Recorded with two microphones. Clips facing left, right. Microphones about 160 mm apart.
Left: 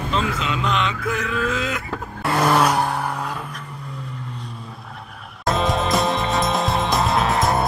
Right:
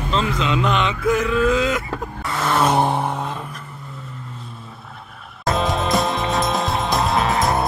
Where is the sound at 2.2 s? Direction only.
70° left (ahead or behind).